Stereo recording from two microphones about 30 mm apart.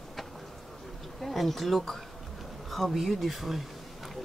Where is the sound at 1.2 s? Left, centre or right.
Centre.